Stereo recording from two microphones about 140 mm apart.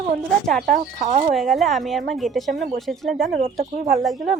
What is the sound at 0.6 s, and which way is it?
Speech, 65° right (ahead or behind).